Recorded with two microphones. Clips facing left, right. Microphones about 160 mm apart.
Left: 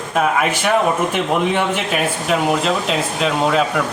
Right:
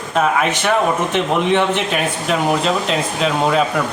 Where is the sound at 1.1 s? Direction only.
10° left (ahead or behind).